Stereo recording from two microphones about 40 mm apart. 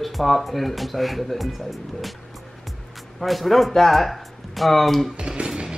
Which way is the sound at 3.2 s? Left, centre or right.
Centre.